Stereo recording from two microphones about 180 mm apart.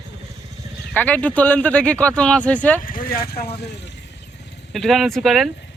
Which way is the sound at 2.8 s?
50° left (ahead or behind).